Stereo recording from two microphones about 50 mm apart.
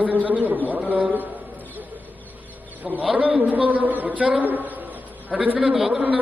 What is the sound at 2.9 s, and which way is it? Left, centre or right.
Speech, centre.